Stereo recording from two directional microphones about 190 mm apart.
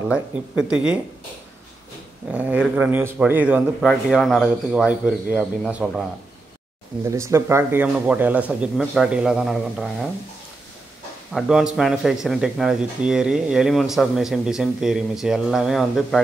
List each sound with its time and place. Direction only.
0.1 s speech: 5° right (ahead or behind)
2.3 s speech: 10° right (ahead or behind)
7.1 s speech: 15° right (ahead or behind)
11.3 s speech: 5° right (ahead or behind)